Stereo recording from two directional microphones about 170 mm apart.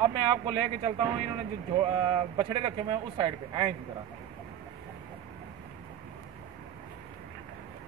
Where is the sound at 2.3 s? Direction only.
30° right (ahead or behind).